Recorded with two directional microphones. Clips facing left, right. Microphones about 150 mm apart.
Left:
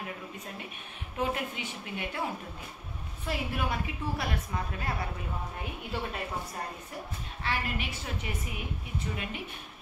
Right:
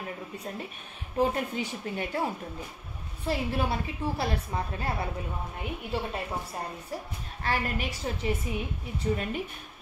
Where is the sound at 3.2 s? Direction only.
30° right (ahead or behind).